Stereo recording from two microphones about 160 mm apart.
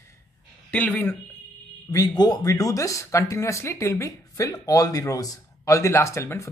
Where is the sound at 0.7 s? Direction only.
10° left (ahead or behind).